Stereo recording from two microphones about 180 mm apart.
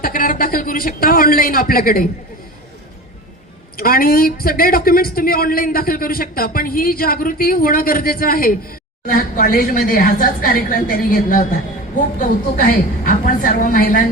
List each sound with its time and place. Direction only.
0.0 s speech: 50° left (ahead or behind)
3.8 s speech: 55° left (ahead or behind)